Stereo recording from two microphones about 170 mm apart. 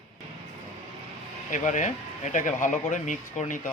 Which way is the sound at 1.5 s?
45° left (ahead or behind).